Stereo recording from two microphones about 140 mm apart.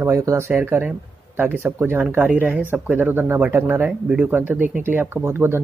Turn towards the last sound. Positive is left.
turn(degrees=-15)  # may be behind; listen again after turning